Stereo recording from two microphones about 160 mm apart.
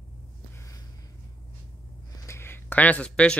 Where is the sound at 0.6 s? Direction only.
20° left (ahead or behind).